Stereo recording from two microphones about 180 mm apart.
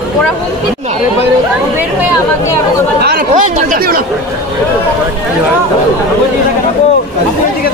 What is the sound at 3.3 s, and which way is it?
Speech, 50° right (ahead or behind).